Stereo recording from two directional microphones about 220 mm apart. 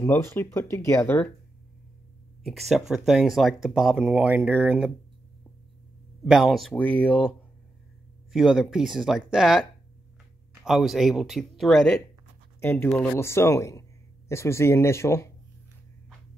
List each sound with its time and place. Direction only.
0.0 s speech: 10° left (ahead or behind)
2.4 s speech: centre (ahead or behind)
6.2 s speech: centre (ahead or behind)